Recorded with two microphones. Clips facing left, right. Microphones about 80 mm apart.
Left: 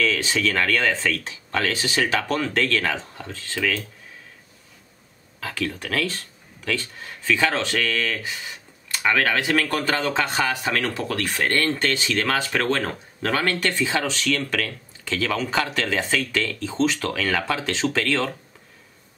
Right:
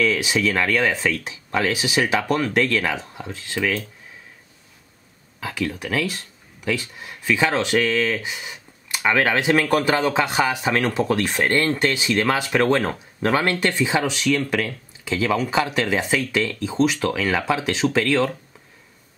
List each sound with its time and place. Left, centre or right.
0.0 s speech: centre
5.4 s speech: centre